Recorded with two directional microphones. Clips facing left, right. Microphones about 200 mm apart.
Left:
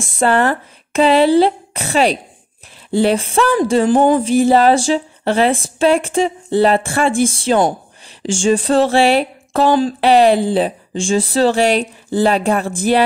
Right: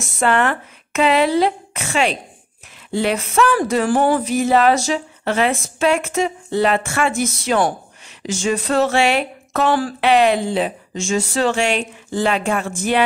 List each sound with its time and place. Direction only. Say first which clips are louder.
0.0 s speech: left 3 dB; 30° left (ahead or behind)
8.2 s a sound: left 6 dB; 30° left (ahead or behind)
9.7 s speech: left 5 dB; 20° left (ahead or behind)
9.9 s speech: left 3 dB; 35° left (ahead or behind)